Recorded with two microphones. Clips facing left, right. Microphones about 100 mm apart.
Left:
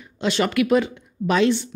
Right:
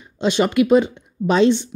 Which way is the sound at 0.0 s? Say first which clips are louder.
Right 3 dB; 20° right (ahead or behind).